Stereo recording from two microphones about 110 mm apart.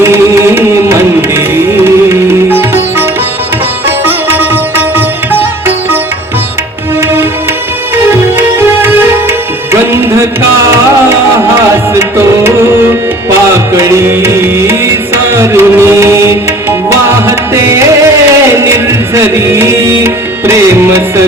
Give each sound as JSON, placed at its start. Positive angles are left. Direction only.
{"t": 0.0, "sound": "music", "side_deg": -25}
{"t": 3.8, "sound": "sitar", "side_deg": -20}
{"t": 8.1, "sound": "music", "side_deg": -20}
{"t": 11.9, "sound": "tabla", "side_deg": -25}
{"t": 13.7, "sound": "music", "side_deg": -25}
{"t": 19.1, "sound": "music", "side_deg": -25}